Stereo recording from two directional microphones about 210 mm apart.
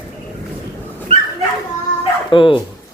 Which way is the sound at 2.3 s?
25° left (ahead or behind).